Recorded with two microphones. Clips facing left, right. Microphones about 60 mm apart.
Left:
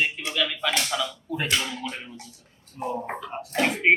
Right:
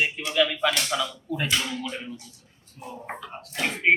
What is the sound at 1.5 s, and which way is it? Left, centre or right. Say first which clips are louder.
Speech: even; centre.